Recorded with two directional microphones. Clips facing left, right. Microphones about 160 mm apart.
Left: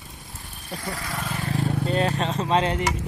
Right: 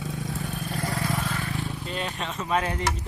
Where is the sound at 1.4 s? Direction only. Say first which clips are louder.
Left 5 dB; 35° left (ahead or behind).